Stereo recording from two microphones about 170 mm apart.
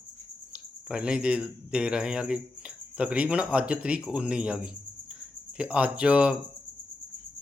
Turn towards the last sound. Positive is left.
turn(degrees=-5)  # may be behind; listen again after turning